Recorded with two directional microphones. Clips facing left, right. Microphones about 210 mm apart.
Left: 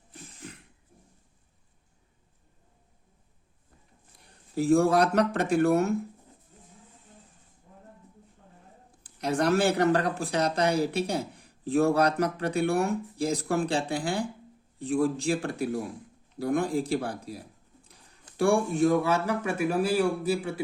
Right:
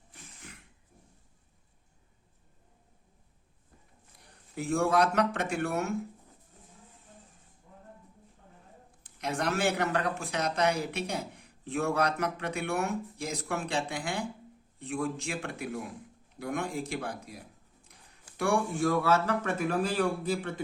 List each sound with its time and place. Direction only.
4.5 s speech: 35° left (ahead or behind)
9.0 s a man's voice: 35° left (ahead or behind); by 20.6 s 10° left (ahead or behind)